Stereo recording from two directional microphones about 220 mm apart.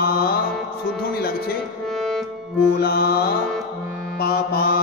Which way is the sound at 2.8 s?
45° left (ahead or behind).